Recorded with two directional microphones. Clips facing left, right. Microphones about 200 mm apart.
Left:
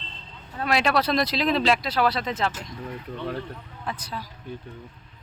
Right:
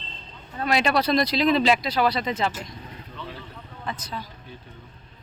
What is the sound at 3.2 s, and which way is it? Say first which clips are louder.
Speech: left 7 dB; 55° left (ahead or behind).